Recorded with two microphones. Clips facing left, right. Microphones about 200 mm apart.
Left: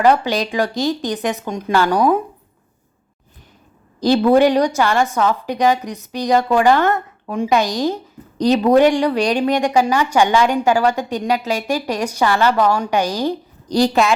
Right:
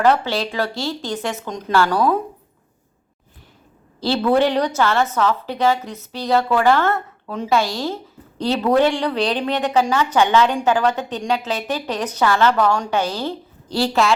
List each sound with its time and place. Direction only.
0.0 s a woman's voice: 15° left (ahead or behind)
4.0 s a woman's voice: 15° left (ahead or behind)